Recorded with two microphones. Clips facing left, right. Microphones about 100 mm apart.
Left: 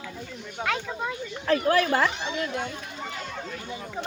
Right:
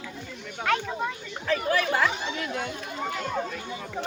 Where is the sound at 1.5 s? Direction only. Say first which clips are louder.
Left 3 dB; 40° left (ahead or behind).